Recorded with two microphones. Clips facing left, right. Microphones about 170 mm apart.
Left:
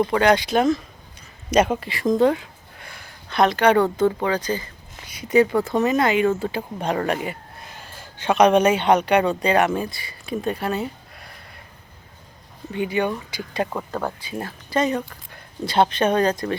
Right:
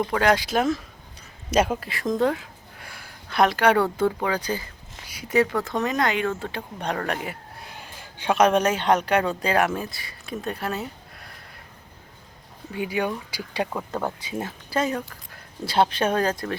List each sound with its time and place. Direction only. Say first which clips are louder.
0.0 s speech: left 4 dB; centre (ahead or behind)
12.7 s speech: left 3 dB; 5° right (ahead or behind)
13.9 s speech: left 1 dB; 20° right (ahead or behind)
14.3 s speech: left 4 dB; 5° right (ahead or behind)